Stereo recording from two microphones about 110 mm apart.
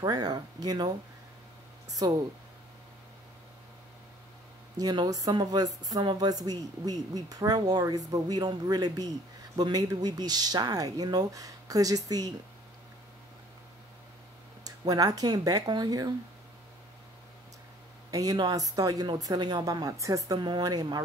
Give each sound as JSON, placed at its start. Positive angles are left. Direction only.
{"t": 0.0, "sound": "speech", "side_deg": -40}
{"t": 4.7, "sound": "speech", "side_deg": -35}
{"t": 14.6, "sound": "speech", "side_deg": -35}
{"t": 18.1, "sound": "speech", "side_deg": -35}